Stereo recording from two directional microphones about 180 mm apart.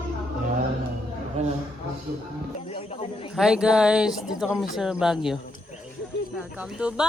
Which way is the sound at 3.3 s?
5° right (ahead or behind).